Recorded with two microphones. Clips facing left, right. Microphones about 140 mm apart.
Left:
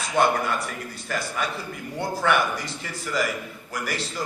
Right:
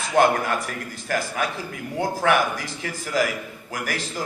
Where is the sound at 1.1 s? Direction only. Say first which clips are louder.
Right 3 dB; 90° right.